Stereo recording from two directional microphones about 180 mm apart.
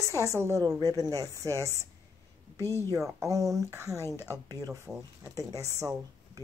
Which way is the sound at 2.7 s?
15° left (ahead or behind).